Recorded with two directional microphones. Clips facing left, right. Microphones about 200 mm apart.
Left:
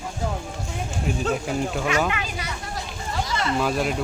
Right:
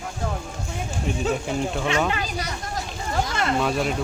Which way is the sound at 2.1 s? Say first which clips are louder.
Right 2 dB; 40° right (ahead or behind).